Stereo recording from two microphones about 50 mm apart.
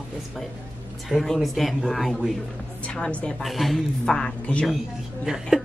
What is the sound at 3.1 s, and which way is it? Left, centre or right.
Speech, left.